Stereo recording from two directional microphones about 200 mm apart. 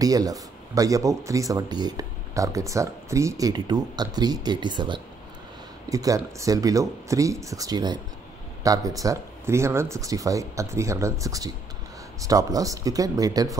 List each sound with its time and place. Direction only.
0.0 s speech: 20° right (ahead or behind)